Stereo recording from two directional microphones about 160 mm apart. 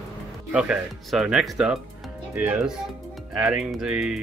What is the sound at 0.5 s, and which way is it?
Speech, 5° right (ahead or behind).